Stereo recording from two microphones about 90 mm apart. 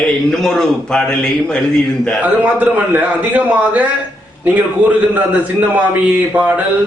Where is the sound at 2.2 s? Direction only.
20° right (ahead or behind).